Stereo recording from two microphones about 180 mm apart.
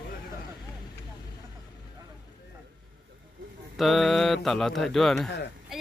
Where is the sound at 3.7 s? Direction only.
Centre (ahead or behind).